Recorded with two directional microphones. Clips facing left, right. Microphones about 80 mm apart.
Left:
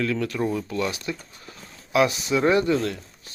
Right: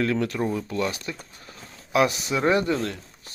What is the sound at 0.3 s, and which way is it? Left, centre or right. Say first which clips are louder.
Speech: left 1 dB; centre.